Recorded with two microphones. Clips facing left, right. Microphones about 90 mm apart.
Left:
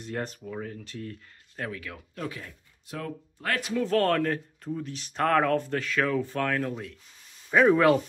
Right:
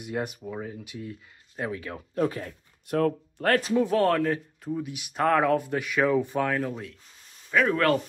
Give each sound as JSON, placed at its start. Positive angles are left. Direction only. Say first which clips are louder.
{"t": 0.0, "sound": "speech", "louder": "right 2 dB", "side_deg": -10}
{"t": 1.6, "sound": "speech", "louder": "right 4 dB", "side_deg": -25}
{"t": 2.9, "sound": "speech", "louder": "right 11 dB", "side_deg": -55}
{"t": 3.9, "sound": "speech", "louder": "left 2 dB", "side_deg": -5}
{"t": 7.5, "sound": "speech", "louder": "left 3 dB", "side_deg": 10}